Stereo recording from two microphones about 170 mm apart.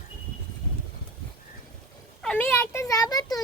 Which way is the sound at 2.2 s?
10° left (ahead or behind).